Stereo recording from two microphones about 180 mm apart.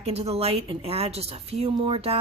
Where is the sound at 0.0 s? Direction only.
35° right (ahead or behind).